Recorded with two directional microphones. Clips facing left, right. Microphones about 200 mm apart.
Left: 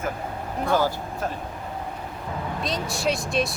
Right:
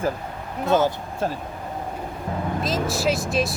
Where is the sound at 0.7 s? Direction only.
20° right (ahead or behind).